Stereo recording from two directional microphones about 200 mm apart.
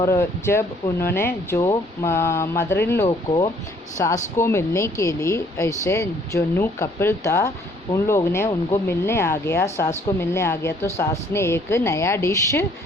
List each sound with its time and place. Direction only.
0.0 s speech: 15° left (ahead or behind)